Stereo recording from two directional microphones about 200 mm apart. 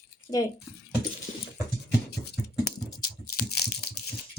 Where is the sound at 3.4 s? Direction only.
55° left (ahead or behind).